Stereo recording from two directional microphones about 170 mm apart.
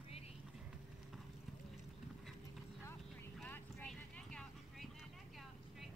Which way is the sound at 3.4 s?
10° left (ahead or behind).